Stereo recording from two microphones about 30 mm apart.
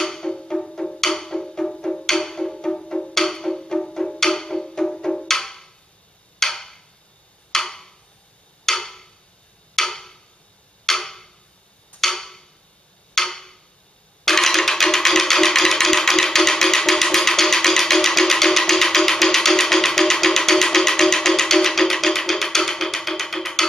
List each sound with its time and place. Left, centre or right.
0.0 s music: centre
6.4 s tick-tock: centre
7.5 s a sound: centre
9.8 s tick-tock: centre
14.2 s music: centre